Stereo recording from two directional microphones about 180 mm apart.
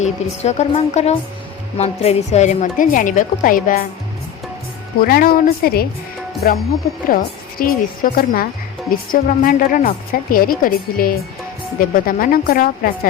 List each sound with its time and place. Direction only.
0.0 s a woman's voice: 40° left (ahead or behind)
5.0 s a woman's voice: 55° left (ahead or behind)
7.6 s a woman's voice: 50° left (ahead or behind)